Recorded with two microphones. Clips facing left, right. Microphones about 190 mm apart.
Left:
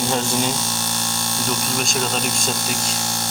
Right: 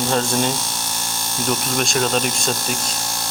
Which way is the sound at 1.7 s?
Centre (ahead or behind).